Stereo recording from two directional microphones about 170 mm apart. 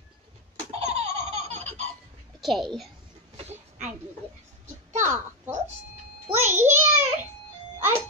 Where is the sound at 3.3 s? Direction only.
40° right (ahead or behind).